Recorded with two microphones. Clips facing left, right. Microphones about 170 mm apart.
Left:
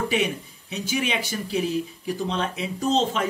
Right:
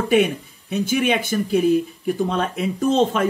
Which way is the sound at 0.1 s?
50° right (ahead or behind).